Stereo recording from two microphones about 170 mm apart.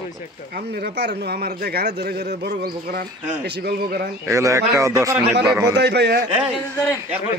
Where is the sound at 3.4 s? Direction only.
75° right (ahead or behind).